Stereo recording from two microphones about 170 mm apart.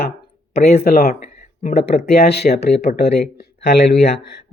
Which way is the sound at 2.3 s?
75° left (ahead or behind).